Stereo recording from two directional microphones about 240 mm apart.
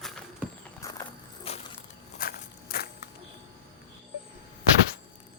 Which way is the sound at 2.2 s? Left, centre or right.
Left.